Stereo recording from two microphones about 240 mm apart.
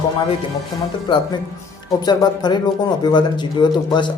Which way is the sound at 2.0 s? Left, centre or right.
Centre.